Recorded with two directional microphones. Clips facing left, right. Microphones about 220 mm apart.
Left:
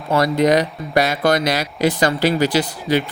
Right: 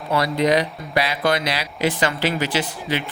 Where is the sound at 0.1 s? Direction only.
45° left (ahead or behind).